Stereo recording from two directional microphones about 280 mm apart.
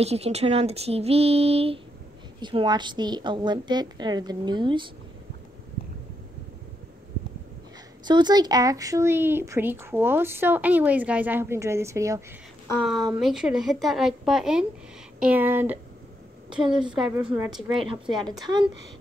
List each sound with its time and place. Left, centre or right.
0.0 s speech: right
8.0 s speech: centre
13.2 s a woman's voice: centre
17.0 s speech: centre
17.4 s a woman's voice: centre
18.4 s speech: centre